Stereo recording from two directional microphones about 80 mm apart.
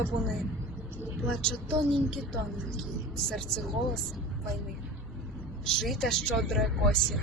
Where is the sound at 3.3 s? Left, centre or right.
Centre.